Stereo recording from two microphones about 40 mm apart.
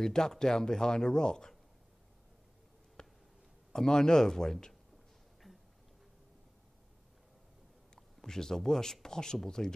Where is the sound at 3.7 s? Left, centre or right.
Centre.